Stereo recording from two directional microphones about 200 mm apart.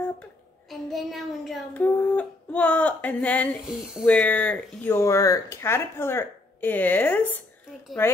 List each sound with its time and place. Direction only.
0.7 s a woman's voice: centre (ahead or behind)